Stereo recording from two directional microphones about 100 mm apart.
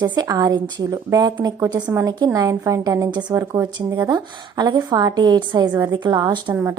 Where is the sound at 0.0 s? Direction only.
45° right (ahead or behind).